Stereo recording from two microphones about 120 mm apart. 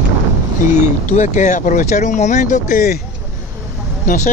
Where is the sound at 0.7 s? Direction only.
75° left (ahead or behind).